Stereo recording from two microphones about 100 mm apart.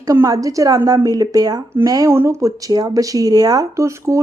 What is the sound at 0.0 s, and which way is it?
Speech, 35° right (ahead or behind).